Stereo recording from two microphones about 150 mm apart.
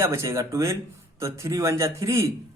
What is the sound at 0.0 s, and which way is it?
Speech, 20° right (ahead or behind).